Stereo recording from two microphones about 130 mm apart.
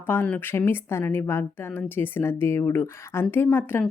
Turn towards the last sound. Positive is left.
turn(degrees=15)  # may be behind; listen again after turning